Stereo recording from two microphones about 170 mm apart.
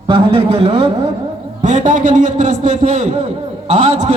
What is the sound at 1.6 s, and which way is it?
A man's voice, 50° right (ahead or behind).